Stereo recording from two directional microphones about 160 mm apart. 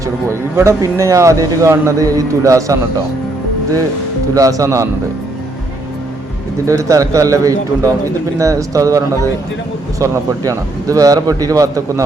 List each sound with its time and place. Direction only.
0.3 s speech: 15° right (ahead or behind)
4.4 s speech: 20° right (ahead or behind)
6.7 s speech: 20° right (ahead or behind)